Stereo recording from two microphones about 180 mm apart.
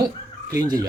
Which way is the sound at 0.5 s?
20° right (ahead or behind).